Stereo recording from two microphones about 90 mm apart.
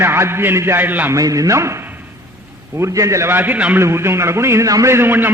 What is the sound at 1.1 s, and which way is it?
A man's voice, 40° right (ahead or behind).